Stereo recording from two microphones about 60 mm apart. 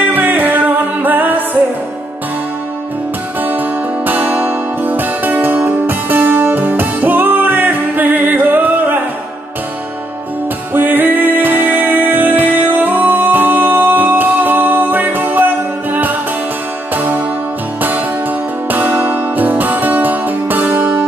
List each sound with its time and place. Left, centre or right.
0.1 s music: right
3.3 s music: right
10.7 s music: right
18.7 s music: right